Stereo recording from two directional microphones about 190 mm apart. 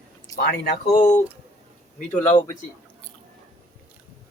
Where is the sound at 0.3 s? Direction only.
55° left (ahead or behind).